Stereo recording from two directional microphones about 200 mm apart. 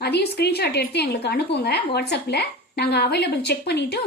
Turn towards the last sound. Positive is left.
turn(degrees=55)  # may be behind; listen again after turning